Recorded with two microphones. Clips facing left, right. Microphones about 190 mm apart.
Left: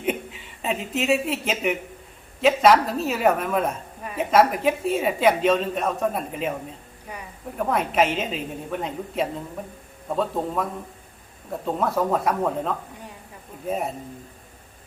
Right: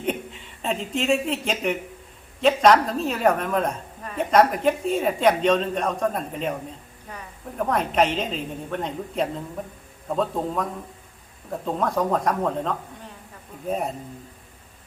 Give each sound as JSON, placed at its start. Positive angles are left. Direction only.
{"t": 0.0, "sound": "a woman's voice", "side_deg": 5}